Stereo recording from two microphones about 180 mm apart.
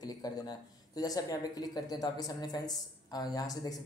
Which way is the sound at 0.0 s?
20° left (ahead or behind).